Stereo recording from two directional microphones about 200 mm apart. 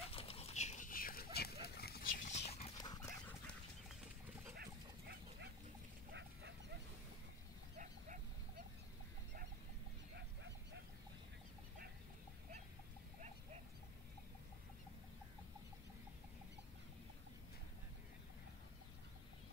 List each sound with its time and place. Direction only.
0.0 s dog: 30° left (ahead or behind)
2.8 s dog: 20° left (ahead or behind)
4.6 s dog: 55° right (ahead or behind)
7.7 s a sound: 45° right (ahead or behind)
10.1 s goose: 60° right (ahead or behind)